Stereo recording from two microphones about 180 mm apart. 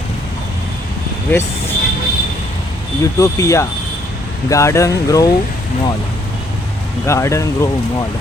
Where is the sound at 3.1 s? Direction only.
15° left (ahead or behind).